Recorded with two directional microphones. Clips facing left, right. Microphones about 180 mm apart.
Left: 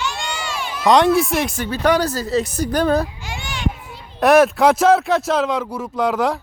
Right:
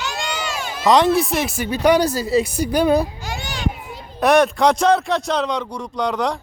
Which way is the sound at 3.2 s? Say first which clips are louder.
Even; 40° right (ahead or behind).